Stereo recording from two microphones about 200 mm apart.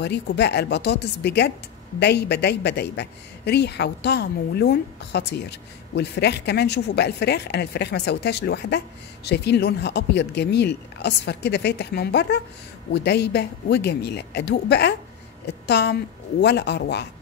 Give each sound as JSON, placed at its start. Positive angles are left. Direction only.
{"t": 0.0, "sound": "a woman's voice", "side_deg": 60}